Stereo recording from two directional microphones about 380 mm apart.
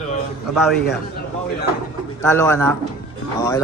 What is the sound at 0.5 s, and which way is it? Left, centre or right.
Speech, centre.